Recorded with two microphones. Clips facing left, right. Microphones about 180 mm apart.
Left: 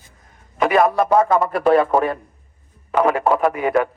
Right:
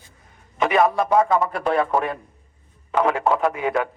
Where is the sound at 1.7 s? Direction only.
35° left (ahead or behind).